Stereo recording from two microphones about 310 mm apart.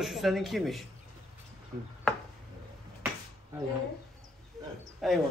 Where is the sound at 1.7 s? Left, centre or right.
Right.